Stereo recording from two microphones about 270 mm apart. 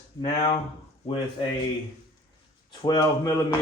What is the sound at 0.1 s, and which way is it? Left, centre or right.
Speech, centre.